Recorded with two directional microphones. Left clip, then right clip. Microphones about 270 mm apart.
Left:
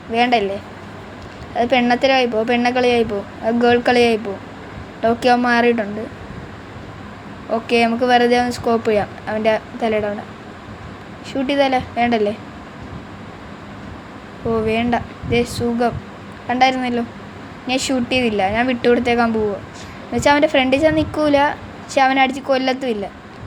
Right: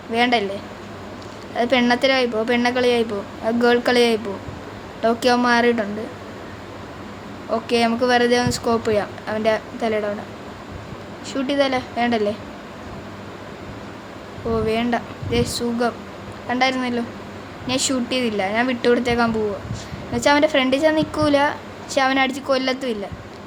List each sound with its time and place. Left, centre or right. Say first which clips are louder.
0.1 s a woman's voice: left 3 dB; centre
1.5 s a woman's voice: left 2 dB; centre
7.5 s a woman's voice: left 3 dB; centre
11.3 s a woman's voice: left 3 dB; centre
14.5 s a woman's voice: left 3 dB; centre